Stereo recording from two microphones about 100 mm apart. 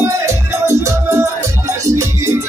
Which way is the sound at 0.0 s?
30° right (ahead or behind).